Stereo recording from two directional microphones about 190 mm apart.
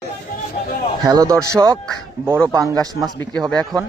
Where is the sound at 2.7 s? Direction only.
20° right (ahead or behind).